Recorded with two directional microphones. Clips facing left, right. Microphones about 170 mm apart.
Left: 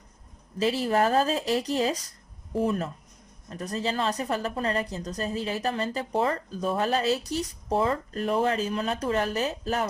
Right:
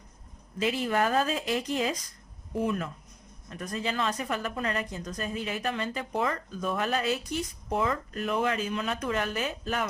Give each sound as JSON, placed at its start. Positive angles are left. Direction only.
{"t": 0.6, "sound": "a woman's voice", "side_deg": 35}